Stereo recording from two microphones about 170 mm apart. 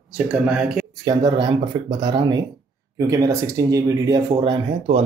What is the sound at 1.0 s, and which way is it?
Speech, 25° right (ahead or behind).